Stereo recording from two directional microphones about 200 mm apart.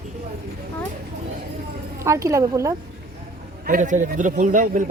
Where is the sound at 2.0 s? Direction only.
15° right (ahead or behind).